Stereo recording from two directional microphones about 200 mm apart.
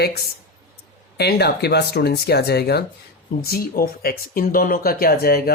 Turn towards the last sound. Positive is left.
turn(degrees=50)  # may be behind; listen again after turning